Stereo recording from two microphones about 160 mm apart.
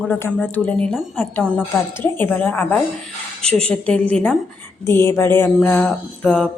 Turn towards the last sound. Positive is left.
turn(degrees=5)  # may be behind; listen again after turning